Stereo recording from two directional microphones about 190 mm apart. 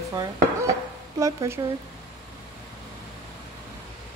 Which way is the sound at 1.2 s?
15° right (ahead or behind).